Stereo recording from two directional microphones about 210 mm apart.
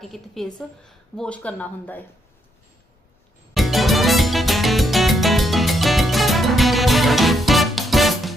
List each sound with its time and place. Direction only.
0.0 s a woman's voice: centre (ahead or behind)
3.5 s music: centre (ahead or behind)